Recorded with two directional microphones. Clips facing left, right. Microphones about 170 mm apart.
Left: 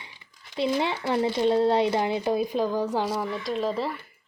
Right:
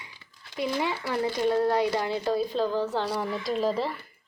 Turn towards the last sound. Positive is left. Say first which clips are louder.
# right 1 dB
turn(degrees=0)  # may be behind; listen again after turning